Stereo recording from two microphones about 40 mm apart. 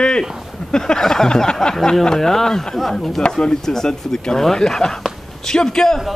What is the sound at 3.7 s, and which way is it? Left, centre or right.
Speech, centre.